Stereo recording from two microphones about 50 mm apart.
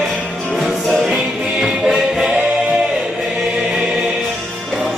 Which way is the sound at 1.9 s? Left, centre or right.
Centre.